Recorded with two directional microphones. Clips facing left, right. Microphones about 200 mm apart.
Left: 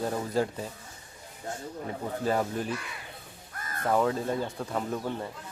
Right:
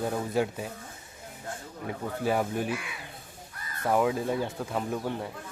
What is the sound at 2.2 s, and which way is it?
Speech, 10° right (ahead or behind).